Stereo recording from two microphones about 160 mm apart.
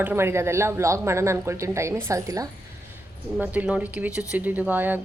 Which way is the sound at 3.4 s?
10° right (ahead or behind).